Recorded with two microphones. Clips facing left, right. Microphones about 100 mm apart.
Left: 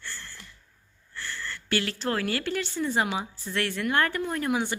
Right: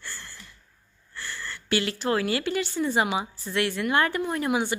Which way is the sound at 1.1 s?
10° right (ahead or behind).